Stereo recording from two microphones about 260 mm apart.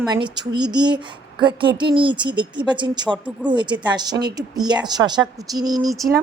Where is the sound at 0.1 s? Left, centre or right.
Centre.